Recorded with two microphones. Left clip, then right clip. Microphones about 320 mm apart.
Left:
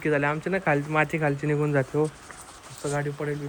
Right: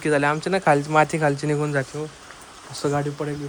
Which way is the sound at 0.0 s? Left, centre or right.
Centre.